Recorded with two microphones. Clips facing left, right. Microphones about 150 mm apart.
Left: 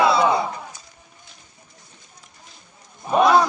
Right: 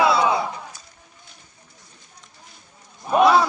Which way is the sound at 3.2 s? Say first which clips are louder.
Even; 5° right (ahead or behind).